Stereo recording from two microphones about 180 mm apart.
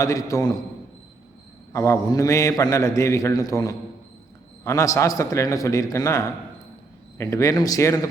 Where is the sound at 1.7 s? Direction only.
15° left (ahead or behind).